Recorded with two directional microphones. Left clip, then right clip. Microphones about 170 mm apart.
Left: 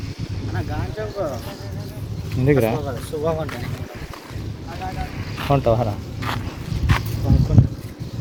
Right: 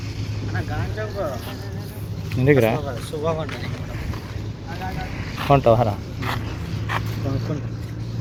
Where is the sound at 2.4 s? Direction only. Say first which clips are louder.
Right 1 dB; 5° left (ahead or behind).